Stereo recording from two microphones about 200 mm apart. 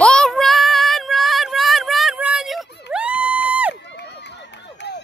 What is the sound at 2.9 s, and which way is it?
Crowd, 5° right (ahead or behind).